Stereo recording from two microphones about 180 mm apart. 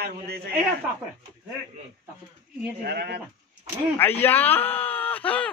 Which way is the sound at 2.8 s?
65° right (ahead or behind).